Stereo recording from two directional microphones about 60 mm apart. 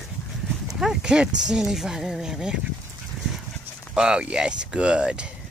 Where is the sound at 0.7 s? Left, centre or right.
Centre.